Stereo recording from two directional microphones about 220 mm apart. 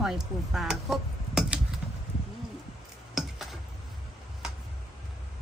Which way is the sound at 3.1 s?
Centre (ahead or behind).